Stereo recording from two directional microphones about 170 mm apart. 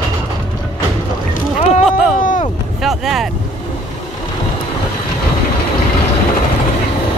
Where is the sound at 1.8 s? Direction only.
Centre (ahead or behind).